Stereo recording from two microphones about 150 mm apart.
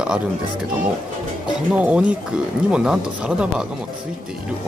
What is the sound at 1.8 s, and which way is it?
Speech, 10° right (ahead or behind).